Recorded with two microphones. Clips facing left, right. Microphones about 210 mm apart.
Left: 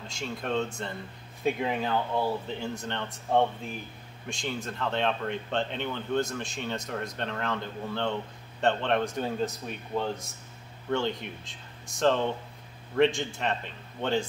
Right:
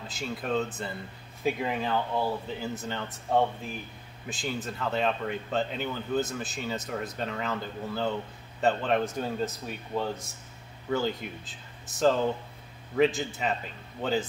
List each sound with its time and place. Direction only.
0.1 s speech: 5° right (ahead or behind)